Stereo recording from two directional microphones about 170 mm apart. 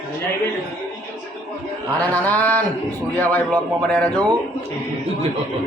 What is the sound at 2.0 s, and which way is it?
A man's voice, 10° left (ahead or behind).